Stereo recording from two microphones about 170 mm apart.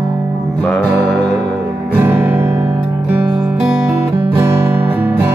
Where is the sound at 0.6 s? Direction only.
10° left (ahead or behind).